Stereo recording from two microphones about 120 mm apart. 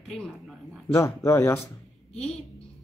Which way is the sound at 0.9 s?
25° left (ahead or behind).